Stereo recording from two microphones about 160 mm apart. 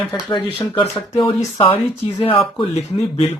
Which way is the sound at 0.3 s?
30° left (ahead or behind).